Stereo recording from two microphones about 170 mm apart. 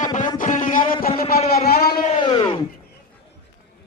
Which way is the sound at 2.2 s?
25° left (ahead or behind).